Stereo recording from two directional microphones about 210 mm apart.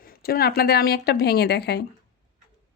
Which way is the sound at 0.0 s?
45° left (ahead or behind).